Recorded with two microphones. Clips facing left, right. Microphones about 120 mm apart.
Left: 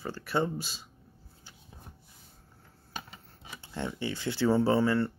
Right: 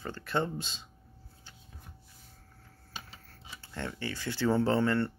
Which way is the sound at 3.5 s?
15° left (ahead or behind).